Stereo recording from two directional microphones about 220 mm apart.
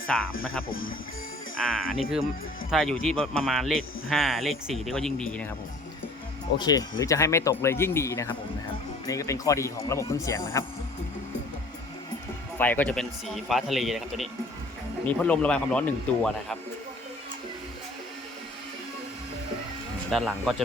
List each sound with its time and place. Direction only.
0.1 s speech: 5° left (ahead or behind)
0.7 s speech: 65° left (ahead or behind)
1.5 s speech: 5° left (ahead or behind)
6.6 s speech: 20° left (ahead or behind)
12.5 s speech: 10° left (ahead or behind)
20.1 s speech: centre (ahead or behind)